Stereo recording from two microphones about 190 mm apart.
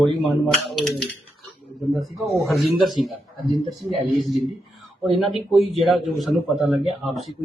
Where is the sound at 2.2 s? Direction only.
Centre (ahead or behind).